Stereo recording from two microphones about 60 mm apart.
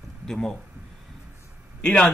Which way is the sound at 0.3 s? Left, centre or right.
Centre.